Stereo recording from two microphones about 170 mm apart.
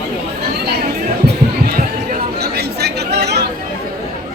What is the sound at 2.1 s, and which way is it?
Chatter, 65° right (ahead or behind).